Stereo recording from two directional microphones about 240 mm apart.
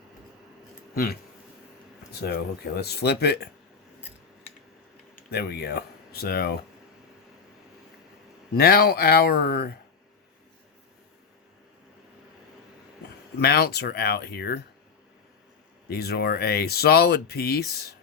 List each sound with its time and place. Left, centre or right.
0.9 s speech: left
2.2 s speech: left
5.3 s speech: left
8.5 s speech: left
13.4 s speech: left
15.9 s speech: left